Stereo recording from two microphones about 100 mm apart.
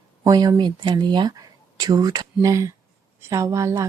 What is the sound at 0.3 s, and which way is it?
A woman's voice, 45° right (ahead or behind).